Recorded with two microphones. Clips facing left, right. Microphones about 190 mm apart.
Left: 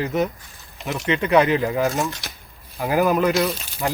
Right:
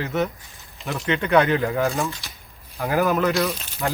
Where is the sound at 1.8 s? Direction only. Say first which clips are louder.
Left 1 dB; 15° left (ahead or behind).